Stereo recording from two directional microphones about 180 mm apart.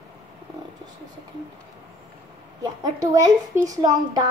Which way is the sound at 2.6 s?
20° right (ahead or behind).